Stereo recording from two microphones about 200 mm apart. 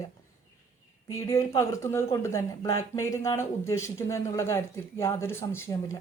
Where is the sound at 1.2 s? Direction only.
15° left (ahead or behind).